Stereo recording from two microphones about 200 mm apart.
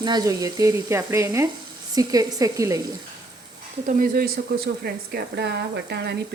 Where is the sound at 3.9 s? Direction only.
45° right (ahead or behind).